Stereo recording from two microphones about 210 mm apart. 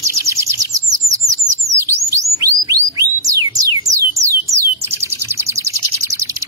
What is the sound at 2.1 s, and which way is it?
Bird, 15° right (ahead or behind).